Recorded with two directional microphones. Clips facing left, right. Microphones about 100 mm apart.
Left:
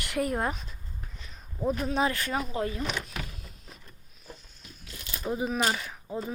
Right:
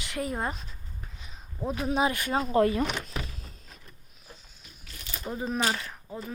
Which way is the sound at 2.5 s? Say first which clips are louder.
Right 8 dB; 65° right (ahead or behind).